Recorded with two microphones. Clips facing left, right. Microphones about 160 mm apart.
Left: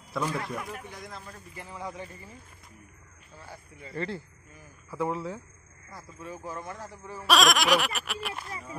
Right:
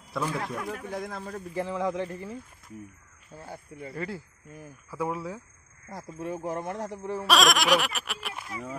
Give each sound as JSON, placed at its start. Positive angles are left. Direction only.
{"t": 0.1, "sound": "speech", "side_deg": 0}
{"t": 0.7, "sound": "speech", "side_deg": -90}
{"t": 3.9, "sound": "speech", "side_deg": -5}
{"t": 5.9, "sound": "speech", "side_deg": -65}
{"t": 7.2, "sound": "speech", "side_deg": 0}